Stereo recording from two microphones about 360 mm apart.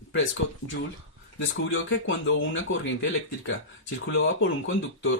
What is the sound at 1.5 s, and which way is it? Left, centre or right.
Speech, left.